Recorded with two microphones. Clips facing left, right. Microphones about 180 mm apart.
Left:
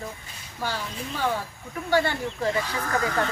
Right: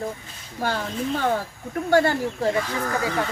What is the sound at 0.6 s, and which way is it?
Speech, 55° right (ahead or behind).